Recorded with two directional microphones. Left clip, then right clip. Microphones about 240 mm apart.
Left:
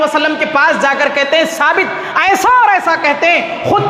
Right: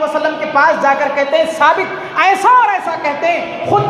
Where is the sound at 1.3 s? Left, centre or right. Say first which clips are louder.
Right 2 dB; left.